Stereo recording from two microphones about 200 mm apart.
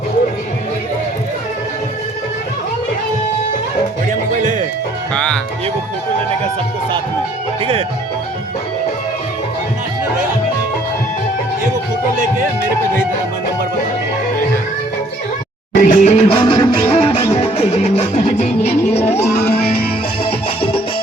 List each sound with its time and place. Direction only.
5.1 s speech: 5° left (ahead or behind)
7.6 s speech: 30° right (ahead or behind)
15.7 s music: 40° left (ahead or behind)
19.0 s music: 10° left (ahead or behind)
19.4 s music: 50° left (ahead or behind)
20.2 s music: 25° left (ahead or behind)